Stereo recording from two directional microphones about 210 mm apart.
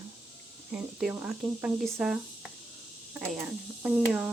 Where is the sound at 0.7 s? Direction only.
5° right (ahead or behind).